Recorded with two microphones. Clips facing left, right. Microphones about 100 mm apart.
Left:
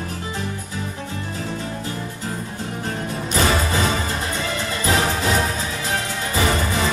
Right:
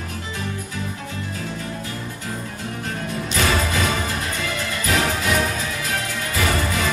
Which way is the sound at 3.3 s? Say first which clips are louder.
Left 2 dB; 30° left (ahead or behind).